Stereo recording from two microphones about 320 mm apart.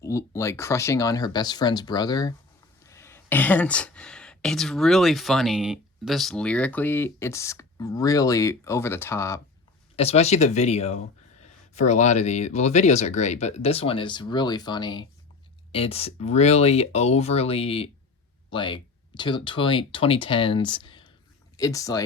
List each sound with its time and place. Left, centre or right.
0.0 s speech: centre
9.9 s speech: centre